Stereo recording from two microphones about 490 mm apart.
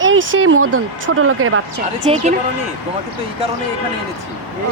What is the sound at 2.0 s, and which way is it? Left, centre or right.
Speech, centre.